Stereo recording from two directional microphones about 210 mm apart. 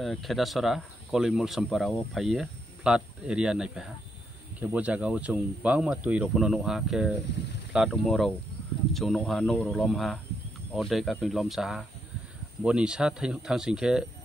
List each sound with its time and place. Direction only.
0.0 s speech: centre (ahead or behind)